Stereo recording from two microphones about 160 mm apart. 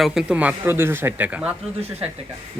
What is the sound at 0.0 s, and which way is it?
Speech, 5° right (ahead or behind).